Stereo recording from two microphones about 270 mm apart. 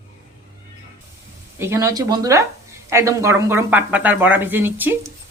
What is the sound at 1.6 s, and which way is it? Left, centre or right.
Speech, centre.